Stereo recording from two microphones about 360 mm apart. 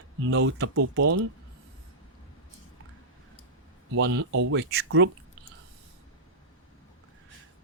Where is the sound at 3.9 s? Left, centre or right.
Right.